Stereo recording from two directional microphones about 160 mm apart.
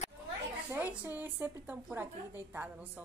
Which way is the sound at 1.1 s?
10° right (ahead or behind).